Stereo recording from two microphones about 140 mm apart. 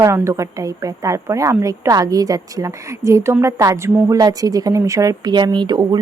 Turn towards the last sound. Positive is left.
turn(degrees=-30)  # may be behind; listen again after turning